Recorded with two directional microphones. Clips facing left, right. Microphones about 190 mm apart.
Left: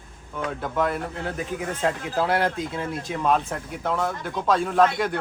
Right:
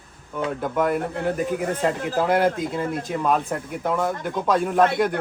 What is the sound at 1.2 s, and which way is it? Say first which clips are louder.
Speech: right 6 dB; 55° right (ahead or behind).